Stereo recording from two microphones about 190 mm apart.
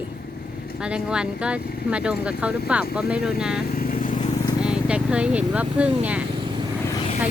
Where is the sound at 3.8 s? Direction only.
45° left (ahead or behind).